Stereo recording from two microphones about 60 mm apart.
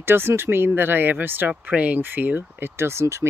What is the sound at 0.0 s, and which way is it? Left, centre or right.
Speech, right.